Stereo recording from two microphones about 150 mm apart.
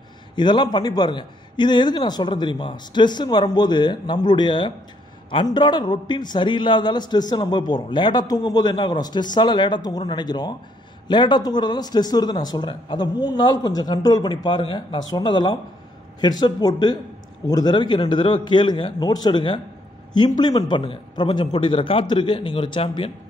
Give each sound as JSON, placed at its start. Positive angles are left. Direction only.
{"t": 0.4, "sound": "a man's voice", "side_deg": 30}